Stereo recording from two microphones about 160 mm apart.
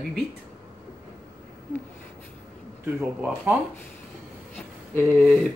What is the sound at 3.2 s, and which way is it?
Speech, 10° right (ahead or behind).